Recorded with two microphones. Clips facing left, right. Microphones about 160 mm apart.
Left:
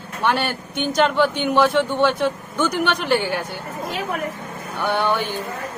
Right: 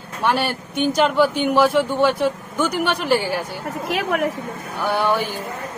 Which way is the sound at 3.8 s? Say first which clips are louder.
Right 4 dB; 75° right (ahead or behind).